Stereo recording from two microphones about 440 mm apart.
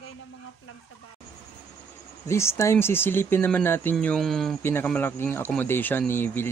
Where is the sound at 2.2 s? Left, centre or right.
Centre.